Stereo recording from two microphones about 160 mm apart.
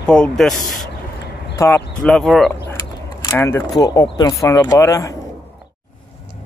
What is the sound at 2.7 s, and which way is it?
Speech, 15° left (ahead or behind).